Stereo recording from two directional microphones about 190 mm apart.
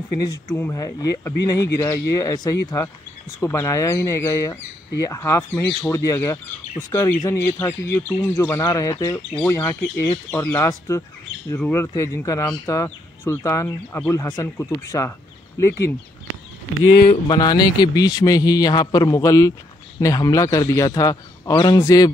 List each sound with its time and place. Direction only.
0.3 s speech: 15° left (ahead or behind)
16.9 s speech: 50° left (ahead or behind)
17.3 s a man's voice: 20° left (ahead or behind)